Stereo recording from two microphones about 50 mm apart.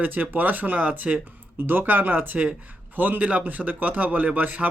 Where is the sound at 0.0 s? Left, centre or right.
Right.